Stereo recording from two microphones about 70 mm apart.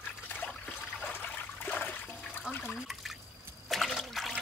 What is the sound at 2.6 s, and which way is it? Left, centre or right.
Liquid, centre.